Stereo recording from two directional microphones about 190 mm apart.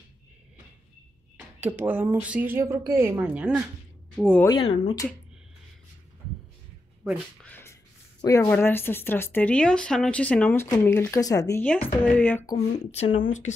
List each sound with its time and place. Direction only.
1.6 s speech: 10° right (ahead or behind)
4.2 s speech: 5° left (ahead or behind)
4.5 s speech: 30° left (ahead or behind)
7.4 s a sound: 10° left (ahead or behind)
8.2 s speech: 15° left (ahead or behind)
12.5 s speech: 35° left (ahead or behind)